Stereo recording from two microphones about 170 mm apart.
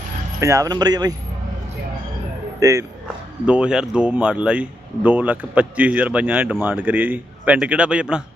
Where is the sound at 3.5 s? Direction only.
5° right (ahead or behind).